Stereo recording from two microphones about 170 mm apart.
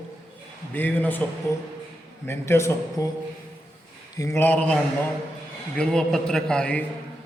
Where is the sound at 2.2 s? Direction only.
15° left (ahead or behind).